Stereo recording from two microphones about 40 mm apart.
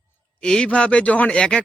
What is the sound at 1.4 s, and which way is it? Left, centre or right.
Speech, centre.